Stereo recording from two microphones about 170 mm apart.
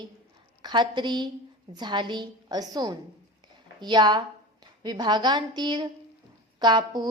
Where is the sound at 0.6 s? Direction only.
25° right (ahead or behind).